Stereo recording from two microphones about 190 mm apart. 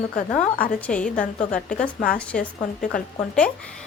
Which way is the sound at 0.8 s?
5° left (ahead or behind).